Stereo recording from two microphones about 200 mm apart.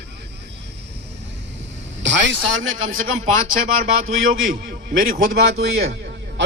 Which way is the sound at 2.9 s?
45° right (ahead or behind).